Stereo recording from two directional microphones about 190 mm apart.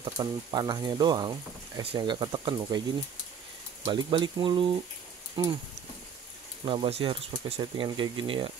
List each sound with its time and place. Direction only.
0.0 s speech: 25° right (ahead or behind)
3.8 s speech: 25° right (ahead or behind)
6.6 s speech: 25° right (ahead or behind)